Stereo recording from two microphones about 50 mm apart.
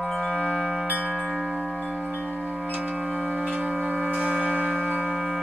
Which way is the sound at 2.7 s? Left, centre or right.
Right.